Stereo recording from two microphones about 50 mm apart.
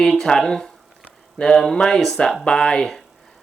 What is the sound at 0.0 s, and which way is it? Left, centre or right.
Speech, centre.